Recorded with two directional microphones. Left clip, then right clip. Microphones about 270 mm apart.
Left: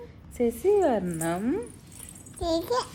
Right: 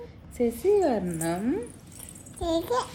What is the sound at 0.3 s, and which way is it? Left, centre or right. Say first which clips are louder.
A child's voice: even; centre.